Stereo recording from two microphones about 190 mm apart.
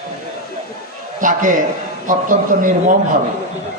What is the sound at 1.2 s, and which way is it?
A man's voice, 40° right (ahead or behind).